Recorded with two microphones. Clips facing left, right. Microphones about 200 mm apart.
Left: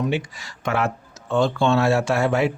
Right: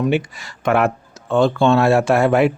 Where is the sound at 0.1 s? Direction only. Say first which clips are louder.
Right 6 dB; 55° right (ahead or behind).